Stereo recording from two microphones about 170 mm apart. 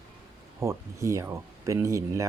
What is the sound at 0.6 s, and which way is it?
Speech, 15° right (ahead or behind).